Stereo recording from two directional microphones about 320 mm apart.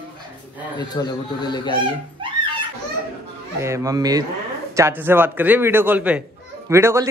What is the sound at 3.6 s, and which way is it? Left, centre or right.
Speech, centre.